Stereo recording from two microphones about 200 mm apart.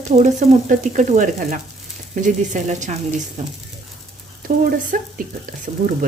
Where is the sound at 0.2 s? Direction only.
40° right (ahead or behind).